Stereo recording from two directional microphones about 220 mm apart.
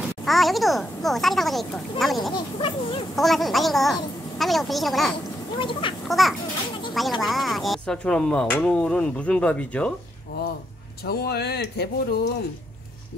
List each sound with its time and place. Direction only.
0.2 s a child's voice: centre (ahead or behind)
2.3 s speech: 25° left (ahead or behind)
3.2 s speech: centre (ahead or behind)
5.6 s speech: 20° left (ahead or behind)
6.0 s a child's voice: centre (ahead or behind)
11.1 s speech: 45° left (ahead or behind)